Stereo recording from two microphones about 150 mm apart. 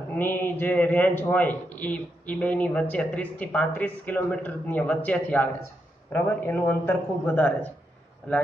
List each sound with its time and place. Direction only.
0.1 s a man's voice: 15° left (ahead or behind)